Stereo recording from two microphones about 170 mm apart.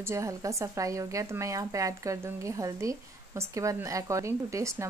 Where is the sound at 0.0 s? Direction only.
15° right (ahead or behind).